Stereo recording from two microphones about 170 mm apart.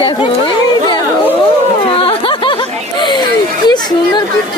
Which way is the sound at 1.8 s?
30° left (ahead or behind).